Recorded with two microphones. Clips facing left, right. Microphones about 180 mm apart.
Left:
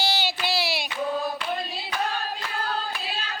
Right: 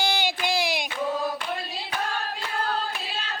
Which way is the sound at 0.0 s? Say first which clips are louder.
Right 1 dB; 15° right (ahead or behind).